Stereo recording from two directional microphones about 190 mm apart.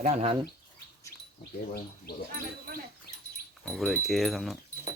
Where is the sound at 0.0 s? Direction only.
35° right (ahead or behind).